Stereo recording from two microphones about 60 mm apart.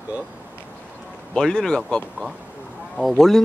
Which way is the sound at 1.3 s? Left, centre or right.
Centre.